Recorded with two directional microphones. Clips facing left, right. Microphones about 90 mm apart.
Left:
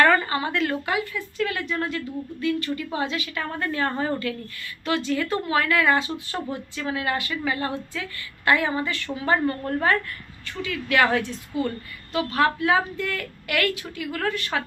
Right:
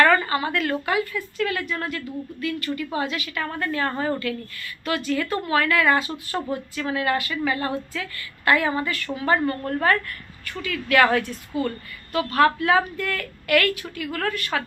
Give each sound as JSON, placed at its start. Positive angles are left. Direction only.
{"t": 0.0, "sound": "a woman's voice", "side_deg": 25}